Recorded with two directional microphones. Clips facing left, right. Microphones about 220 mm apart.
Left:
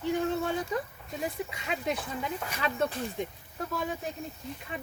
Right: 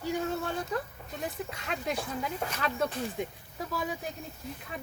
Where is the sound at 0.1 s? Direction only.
Centre (ahead or behind).